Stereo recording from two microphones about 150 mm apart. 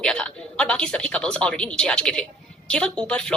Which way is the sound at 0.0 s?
5° left (ahead or behind).